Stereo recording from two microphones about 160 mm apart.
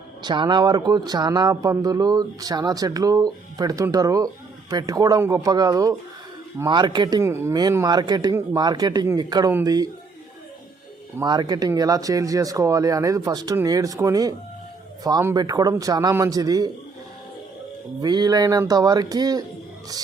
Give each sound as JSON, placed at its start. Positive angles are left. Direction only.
{"t": 0.2, "sound": "speech", "side_deg": -25}
{"t": 11.2, "sound": "speech", "side_deg": -25}
{"t": 18.0, "sound": "speech", "side_deg": -25}